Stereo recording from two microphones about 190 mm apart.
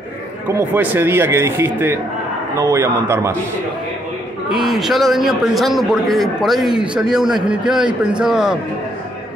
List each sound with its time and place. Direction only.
0.6 s speech: 10° right (ahead or behind)
4.5 s a man's voice: 5° right (ahead or behind)